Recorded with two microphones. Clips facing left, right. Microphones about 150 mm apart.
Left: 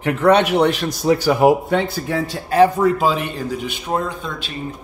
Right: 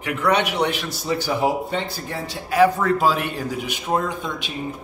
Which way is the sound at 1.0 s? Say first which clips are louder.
Left 8 dB; 60° left (ahead or behind).